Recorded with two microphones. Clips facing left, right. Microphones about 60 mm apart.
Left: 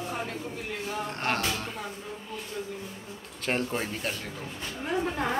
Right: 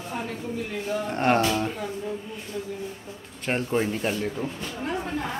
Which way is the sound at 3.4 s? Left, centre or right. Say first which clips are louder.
Right 4 dB; centre.